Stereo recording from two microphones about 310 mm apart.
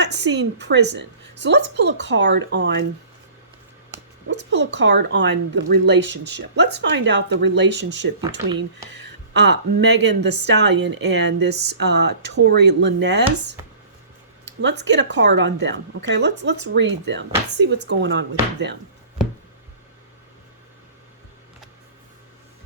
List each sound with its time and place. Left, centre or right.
0.0 s a woman's voice: right
4.3 s speech: right
9.9 s speech: right
10.2 s speech: right
14.4 s speech: right